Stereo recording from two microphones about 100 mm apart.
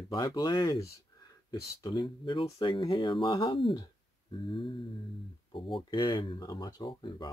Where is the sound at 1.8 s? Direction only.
45° left (ahead or behind).